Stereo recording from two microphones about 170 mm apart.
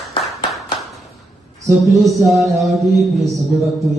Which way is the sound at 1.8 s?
Centre (ahead or behind).